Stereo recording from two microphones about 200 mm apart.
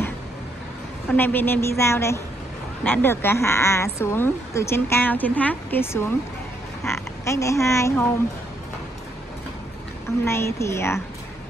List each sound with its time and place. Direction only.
1.1 s speech: 10° left (ahead or behind)
10.2 s speech: 15° left (ahead or behind)